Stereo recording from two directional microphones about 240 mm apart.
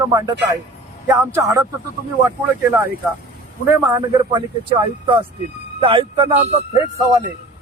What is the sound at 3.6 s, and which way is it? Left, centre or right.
Speech, centre.